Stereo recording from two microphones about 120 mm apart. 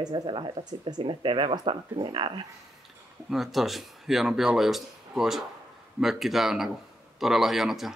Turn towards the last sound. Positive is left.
turn(degrees=0)  # may be behind; listen again after turning